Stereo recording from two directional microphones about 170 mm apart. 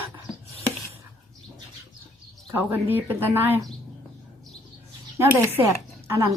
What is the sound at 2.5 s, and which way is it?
Speech, 10° right (ahead or behind).